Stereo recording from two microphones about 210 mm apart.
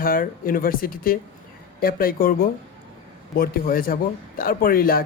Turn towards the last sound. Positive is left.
turn(degrees=45)  # may be behind; listen again after turning